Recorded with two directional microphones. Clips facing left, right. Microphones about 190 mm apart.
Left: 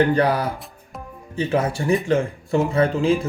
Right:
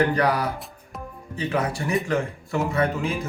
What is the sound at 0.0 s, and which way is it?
Speech, 25° left (ahead or behind).